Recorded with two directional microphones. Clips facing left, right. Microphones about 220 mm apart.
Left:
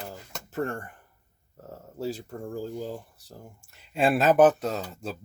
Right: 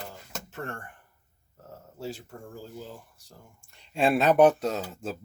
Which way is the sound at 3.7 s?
5° left (ahead or behind).